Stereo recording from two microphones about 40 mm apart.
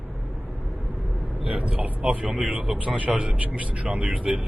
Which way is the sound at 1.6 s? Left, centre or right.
Right.